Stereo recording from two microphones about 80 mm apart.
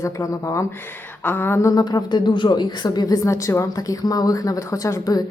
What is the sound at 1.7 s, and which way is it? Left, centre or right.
Speech, left.